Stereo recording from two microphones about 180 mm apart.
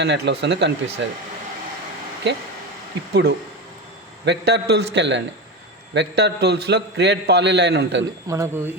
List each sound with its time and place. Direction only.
0.0 s a man's voice: 70° right (ahead or behind)
1.0 s speech: 85° right
3.1 s a man's voice: 65° right (ahead or behind)
8.3 s speech: 15° right (ahead or behind)